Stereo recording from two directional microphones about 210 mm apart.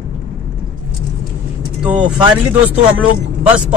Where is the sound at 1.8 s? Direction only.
5° right (ahead or behind).